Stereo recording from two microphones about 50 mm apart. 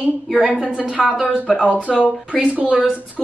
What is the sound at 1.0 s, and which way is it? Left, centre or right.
Speech, centre.